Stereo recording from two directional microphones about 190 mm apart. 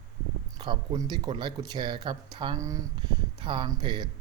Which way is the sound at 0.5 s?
20° right (ahead or behind).